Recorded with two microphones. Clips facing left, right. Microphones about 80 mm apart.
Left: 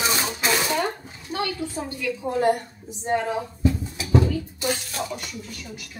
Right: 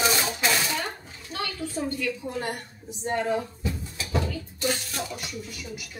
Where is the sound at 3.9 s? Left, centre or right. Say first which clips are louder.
Left 5 dB; centre.